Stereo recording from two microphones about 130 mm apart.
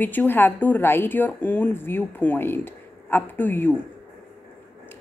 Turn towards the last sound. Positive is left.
turn(degrees=15)  # may be behind; listen again after turning